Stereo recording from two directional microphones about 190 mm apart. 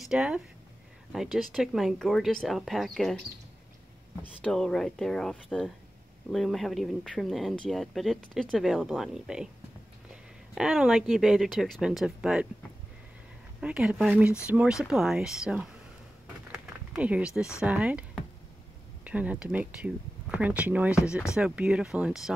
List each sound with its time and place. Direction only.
0.0 s speech: 5° right (ahead or behind)
4.2 s speech: 5° left (ahead or behind)
10.5 s speech: 5° right (ahead or behind)
13.6 s speech: 5° right (ahead or behind)
16.5 s a sound: 5° right (ahead or behind)
17.6 s speech: 5° right (ahead or behind)
19.0 s speech: 5° right (ahead or behind)